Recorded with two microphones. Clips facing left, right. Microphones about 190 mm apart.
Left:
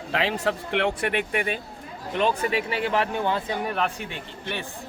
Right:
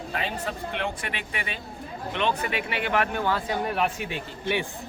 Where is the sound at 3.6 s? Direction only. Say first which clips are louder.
Right 1 dB; 5° right (ahead or behind).